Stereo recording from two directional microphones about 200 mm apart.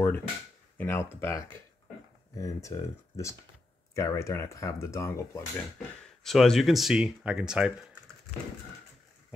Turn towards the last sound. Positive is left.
turn(degrees=-5)  # may be behind; listen again after turning